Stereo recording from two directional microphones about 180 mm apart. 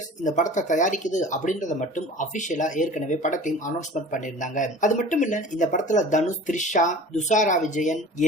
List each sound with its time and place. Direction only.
0.2 s speech: 45° left (ahead or behind)